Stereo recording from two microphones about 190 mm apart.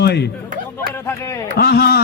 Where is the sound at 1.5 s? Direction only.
55° left (ahead or behind).